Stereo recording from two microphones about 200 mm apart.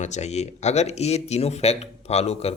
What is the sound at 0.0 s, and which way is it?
Speech, 35° left (ahead or behind).